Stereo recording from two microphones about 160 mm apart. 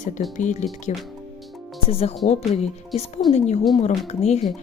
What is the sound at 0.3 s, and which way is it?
A woman's voice, 50° left (ahead or behind).